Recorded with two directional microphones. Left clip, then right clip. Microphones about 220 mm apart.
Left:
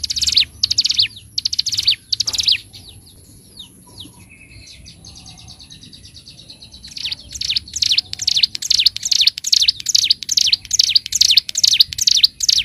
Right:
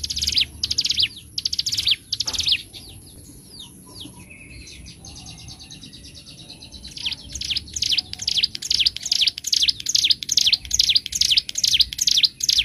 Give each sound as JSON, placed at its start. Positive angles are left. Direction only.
{"t": 0.0, "sound": "bird", "side_deg": 20}
{"t": 6.9, "sound": "bird", "side_deg": 20}